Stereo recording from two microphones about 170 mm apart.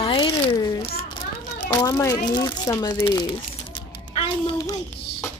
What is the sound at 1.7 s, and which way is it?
A child's voice, 15° left (ahead or behind).